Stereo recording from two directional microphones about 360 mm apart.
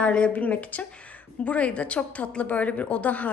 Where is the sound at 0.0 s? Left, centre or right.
Centre.